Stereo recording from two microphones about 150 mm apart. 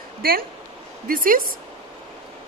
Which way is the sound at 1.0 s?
70° right (ahead or behind).